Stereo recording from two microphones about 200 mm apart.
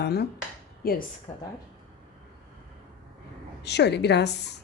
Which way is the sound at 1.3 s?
30° left (ahead or behind).